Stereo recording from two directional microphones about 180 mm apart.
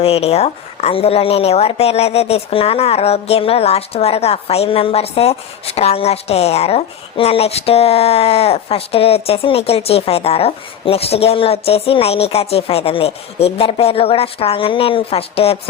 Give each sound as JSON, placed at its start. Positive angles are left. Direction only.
{"t": 0.0, "sound": "a woman's voice", "side_deg": 35}